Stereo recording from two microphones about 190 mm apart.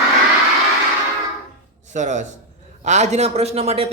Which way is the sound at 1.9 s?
40° right (ahead or behind).